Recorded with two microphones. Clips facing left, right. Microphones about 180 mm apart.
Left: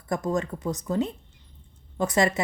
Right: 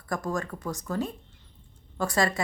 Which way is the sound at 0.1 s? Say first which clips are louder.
Left 4 dB; 20° left (ahead or behind).